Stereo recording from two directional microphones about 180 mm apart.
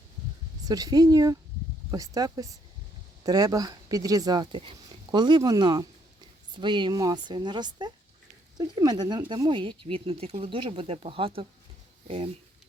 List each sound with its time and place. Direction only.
0.6 s speech: 20° right (ahead or behind)